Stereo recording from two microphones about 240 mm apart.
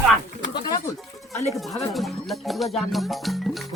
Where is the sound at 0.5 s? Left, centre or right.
Centre.